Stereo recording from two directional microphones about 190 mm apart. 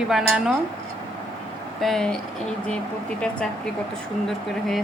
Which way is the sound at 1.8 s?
Centre (ahead or behind).